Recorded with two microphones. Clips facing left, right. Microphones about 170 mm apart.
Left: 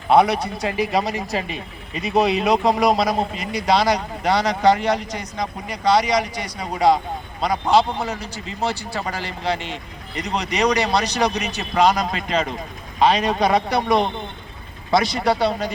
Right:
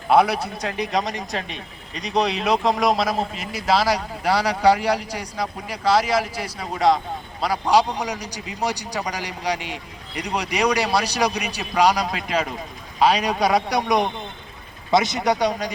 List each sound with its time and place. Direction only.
0.1 s a man's voice: centre (ahead or behind)
7.9 s a man's voice: 15° right (ahead or behind)